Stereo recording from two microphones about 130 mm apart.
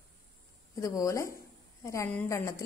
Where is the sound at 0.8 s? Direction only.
25° left (ahead or behind).